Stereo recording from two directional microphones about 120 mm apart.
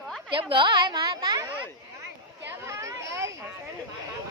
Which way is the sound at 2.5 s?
25° right (ahead or behind).